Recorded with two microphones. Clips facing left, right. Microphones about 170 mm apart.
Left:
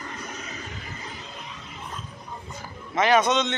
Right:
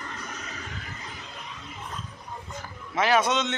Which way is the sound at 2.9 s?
5° right (ahead or behind).